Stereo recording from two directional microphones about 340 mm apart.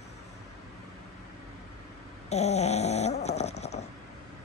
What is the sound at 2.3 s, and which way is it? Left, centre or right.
Snoring, centre.